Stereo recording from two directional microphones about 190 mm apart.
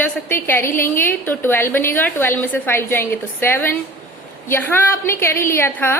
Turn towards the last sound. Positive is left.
turn(degrees=10)  # may be behind; listen again after turning